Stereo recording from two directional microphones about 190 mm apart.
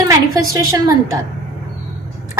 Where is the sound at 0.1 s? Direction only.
15° right (ahead or behind).